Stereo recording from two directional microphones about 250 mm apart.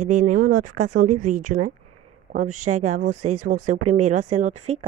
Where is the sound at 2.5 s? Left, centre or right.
Right.